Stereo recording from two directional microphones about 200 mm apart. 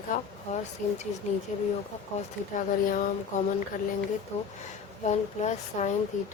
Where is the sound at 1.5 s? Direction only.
35° left (ahead or behind).